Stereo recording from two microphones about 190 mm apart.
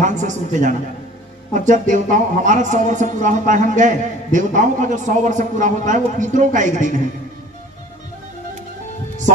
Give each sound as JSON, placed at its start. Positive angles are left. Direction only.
{"t": 0.0, "sound": "speech", "side_deg": -40}